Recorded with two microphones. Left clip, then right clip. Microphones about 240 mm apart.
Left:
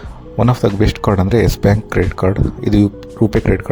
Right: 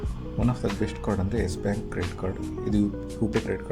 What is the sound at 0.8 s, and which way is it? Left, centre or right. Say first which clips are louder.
Speech: left 14 dB; left.